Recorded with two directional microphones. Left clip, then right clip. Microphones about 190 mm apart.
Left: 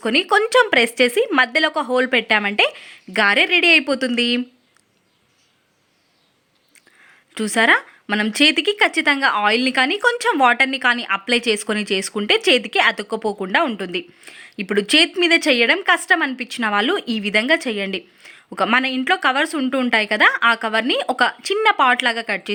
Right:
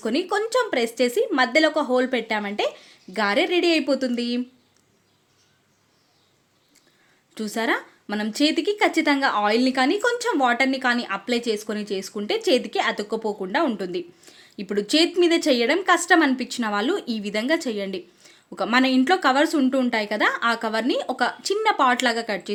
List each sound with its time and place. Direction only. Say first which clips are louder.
0.0 s a woman's voice: left 7 dB; 15° left (ahead or behind)
7.3 s a woman's voice: left 9 dB; 15° left (ahead or behind)